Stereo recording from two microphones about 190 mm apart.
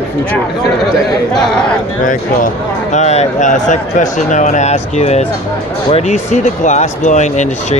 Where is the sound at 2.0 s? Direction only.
40° left (ahead or behind).